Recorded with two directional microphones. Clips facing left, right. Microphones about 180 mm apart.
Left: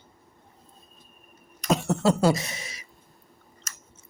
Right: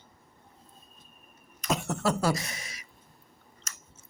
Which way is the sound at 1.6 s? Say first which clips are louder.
Left 6 dB; 30° left (ahead or behind).